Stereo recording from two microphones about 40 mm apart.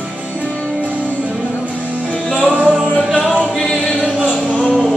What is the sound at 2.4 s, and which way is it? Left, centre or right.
Music, right.